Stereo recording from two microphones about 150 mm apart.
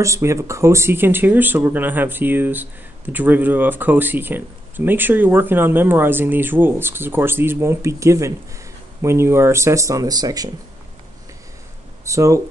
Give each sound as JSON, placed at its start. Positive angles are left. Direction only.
{"t": 0.0, "sound": "speech", "side_deg": -20}
{"t": 12.0, "sound": "speech", "side_deg": -20}